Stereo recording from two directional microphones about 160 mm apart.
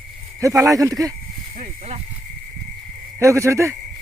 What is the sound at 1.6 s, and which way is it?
Speech, 45° right (ahead or behind).